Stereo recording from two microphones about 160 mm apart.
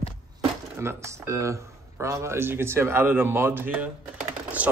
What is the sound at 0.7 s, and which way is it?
Speech, 15° right (ahead or behind).